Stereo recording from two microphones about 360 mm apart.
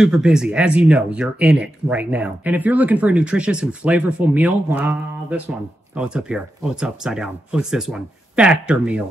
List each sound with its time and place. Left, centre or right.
0.0 s speech: centre